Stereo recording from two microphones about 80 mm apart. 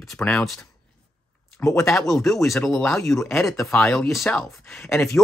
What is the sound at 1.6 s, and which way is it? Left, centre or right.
Speech, left.